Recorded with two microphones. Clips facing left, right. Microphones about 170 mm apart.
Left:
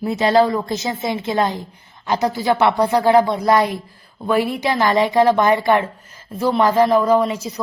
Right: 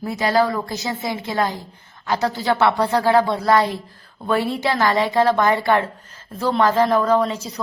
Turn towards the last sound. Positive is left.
turn(degrees=10)  # may be behind; listen again after turning